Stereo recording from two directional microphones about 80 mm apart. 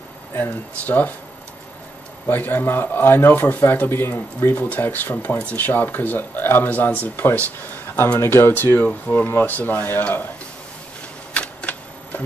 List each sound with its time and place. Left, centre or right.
0.3 s speech: left
2.2 s speech: left
11.3 s a sound: centre